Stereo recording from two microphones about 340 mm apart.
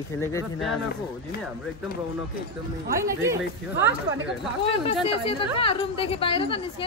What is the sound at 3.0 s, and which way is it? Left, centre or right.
Speech, centre.